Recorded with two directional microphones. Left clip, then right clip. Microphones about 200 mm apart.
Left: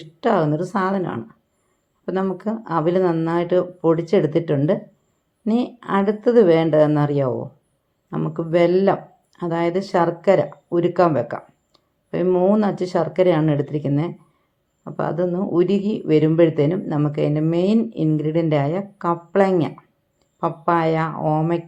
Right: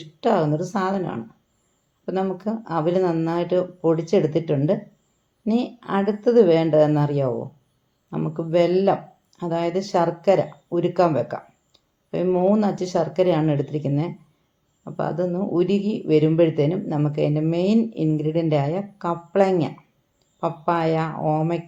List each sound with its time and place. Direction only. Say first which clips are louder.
0.0 s speech: left 1 dB; 20° left (ahead or behind)